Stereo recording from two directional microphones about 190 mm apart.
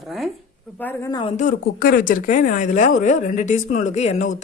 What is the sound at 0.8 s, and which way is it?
Speech, 10° left (ahead or behind).